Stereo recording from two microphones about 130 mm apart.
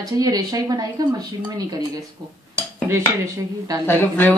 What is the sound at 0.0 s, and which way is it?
Speech, 30° right (ahead or behind).